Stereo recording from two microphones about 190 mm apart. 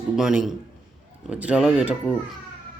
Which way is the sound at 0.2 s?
5° right (ahead or behind).